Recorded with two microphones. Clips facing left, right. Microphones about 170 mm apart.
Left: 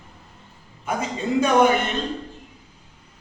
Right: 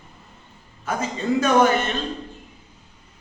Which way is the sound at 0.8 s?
15° left (ahead or behind).